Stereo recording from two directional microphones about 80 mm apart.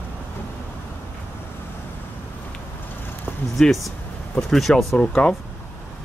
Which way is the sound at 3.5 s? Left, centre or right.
Centre.